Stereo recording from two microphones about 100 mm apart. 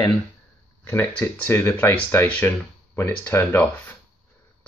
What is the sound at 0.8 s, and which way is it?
Speech, 20° left (ahead or behind).